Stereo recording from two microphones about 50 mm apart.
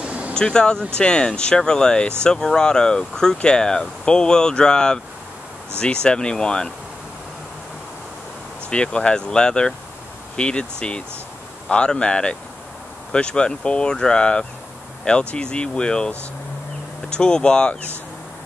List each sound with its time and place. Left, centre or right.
0.0 s vehicle: right
0.3 s speech: centre
8.6 s speech: centre
17.1 s speech: centre